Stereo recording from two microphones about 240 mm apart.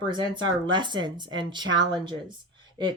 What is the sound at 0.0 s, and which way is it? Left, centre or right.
Speech, centre.